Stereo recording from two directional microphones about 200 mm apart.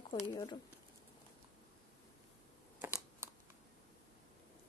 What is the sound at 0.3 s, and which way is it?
Speech, 15° left (ahead or behind).